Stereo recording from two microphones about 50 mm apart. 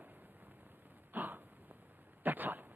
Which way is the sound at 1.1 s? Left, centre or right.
Right.